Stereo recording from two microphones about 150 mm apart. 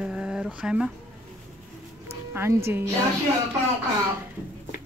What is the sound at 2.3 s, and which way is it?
Speech, 15° right (ahead or behind).